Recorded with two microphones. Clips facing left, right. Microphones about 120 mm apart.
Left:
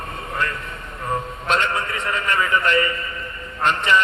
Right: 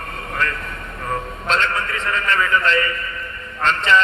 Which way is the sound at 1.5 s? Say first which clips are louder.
Even; 15° left (ahead or behind).